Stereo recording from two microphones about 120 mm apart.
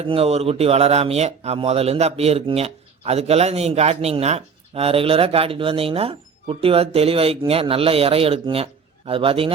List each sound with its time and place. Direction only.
0.0 s speech: 55° right (ahead or behind)